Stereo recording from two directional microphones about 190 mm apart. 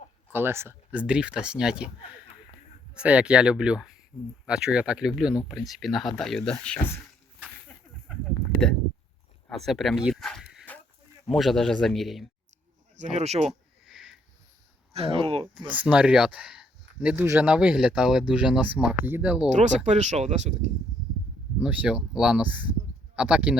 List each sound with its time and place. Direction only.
0.3 s speech: 10° right (ahead or behind)
2.9 s speech: 5° right (ahead or behind)
4.1 s speech: 10° left (ahead or behind)
4.4 s speech: 5° right (ahead or behind)
9.5 s a sound: centre (ahead or behind)
11.3 s speech: centre (ahead or behind)
13.0 s speech: 35° right (ahead or behind)
13.5 s a sound: centre (ahead or behind)
14.9 s speech: 30° right (ahead or behind)
15.7 s speech: 5° right (ahead or behind)
19.5 s speech: 40° right (ahead or behind)
21.6 s speech: 5° right (ahead or behind)